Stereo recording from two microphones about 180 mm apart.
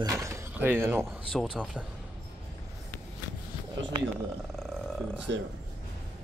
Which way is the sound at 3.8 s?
90° right.